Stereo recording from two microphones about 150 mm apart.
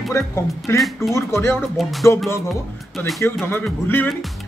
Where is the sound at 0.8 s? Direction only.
Centre (ahead or behind).